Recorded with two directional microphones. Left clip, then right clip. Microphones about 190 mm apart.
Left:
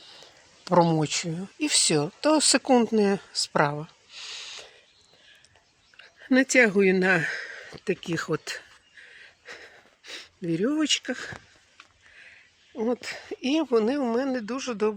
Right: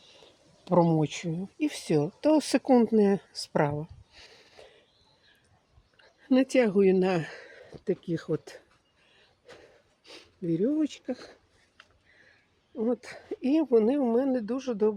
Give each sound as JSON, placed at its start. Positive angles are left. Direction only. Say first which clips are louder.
{"t": 0.6, "sound": "speech", "louder": "left 3 dB", "side_deg": -10}
{"t": 4.1, "sound": "a sound", "louder": "left 14 dB", "side_deg": -25}
{"t": 6.0, "sound": "speech", "louder": "left 3 dB", "side_deg": 0}
{"t": 10.1, "sound": "a sound", "louder": "left 1 dB", "side_deg": 5}
{"t": 10.8, "sound": "speech", "louder": "left 6 dB", "side_deg": 5}
{"t": 12.7, "sound": "speech", "louder": "left 2 dB", "side_deg": -5}